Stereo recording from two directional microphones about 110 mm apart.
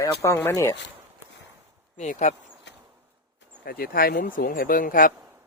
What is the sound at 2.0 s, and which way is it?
Speech, 90° left.